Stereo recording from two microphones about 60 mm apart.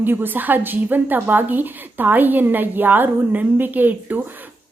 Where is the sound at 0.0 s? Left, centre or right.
Right.